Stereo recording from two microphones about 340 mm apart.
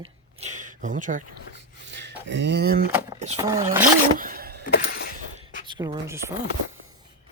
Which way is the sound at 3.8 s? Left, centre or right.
Right.